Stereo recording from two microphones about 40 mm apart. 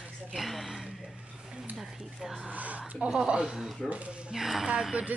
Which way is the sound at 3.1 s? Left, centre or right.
Centre.